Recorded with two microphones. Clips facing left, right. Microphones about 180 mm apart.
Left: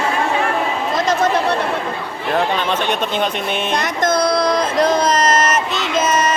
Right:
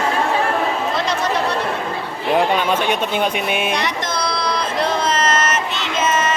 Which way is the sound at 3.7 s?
50° left (ahead or behind).